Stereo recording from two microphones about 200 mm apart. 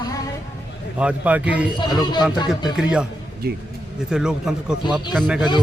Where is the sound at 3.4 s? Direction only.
50° right (ahead or behind).